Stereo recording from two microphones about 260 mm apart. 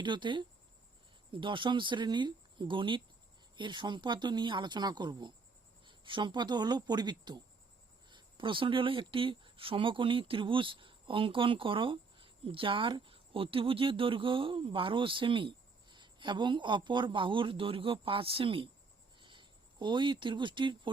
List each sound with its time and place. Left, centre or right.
0.0 s speech: centre